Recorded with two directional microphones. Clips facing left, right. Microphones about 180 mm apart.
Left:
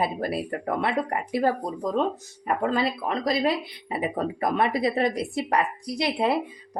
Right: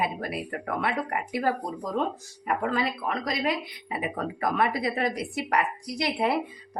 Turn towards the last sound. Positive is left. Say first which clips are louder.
# left 2 dB
turn(degrees=25)  # may be behind; listen again after turning